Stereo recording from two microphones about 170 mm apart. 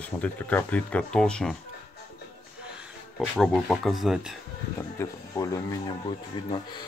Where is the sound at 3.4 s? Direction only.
Centre (ahead or behind).